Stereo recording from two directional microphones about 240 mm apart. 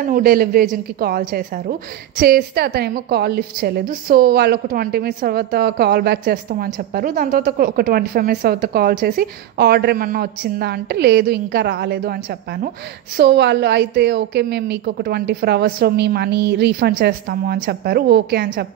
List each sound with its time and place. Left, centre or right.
0.0 s a woman's voice: right